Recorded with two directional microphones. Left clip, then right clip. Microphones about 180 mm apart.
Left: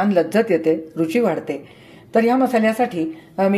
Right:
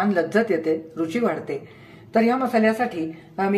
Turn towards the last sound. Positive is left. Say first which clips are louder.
# left 5 dB
turn(degrees=35)  # may be behind; listen again after turning